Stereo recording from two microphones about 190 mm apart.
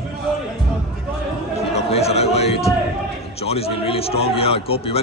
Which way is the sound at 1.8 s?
35° left (ahead or behind).